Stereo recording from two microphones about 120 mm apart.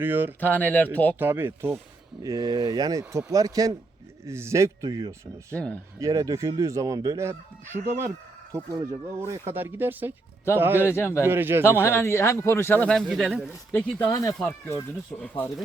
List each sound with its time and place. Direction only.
0.0 s speech: 15° right (ahead or behind)
0.3 s speech: 15° left (ahead or behind)
1.2 s speech: 20° right (ahead or behind)
2.2 s speech: 30° right (ahead or behind)
5.5 s speech: 10° left (ahead or behind)
6.0 s speech: 30° right (ahead or behind)
10.8 s speech: 20° left (ahead or behind)
11.3 s speech: 20° right (ahead or behind)
11.6 s speech: 20° left (ahead or behind)
12.9 s speech: centre (ahead or behind)
13.7 s speech: 15° left (ahead or behind)
14.1 s speech: 30° left (ahead or behind)
14.3 s speech: 15° left (ahead or behind)